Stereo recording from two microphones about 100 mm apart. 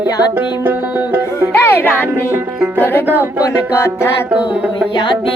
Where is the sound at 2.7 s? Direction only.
20° left (ahead or behind).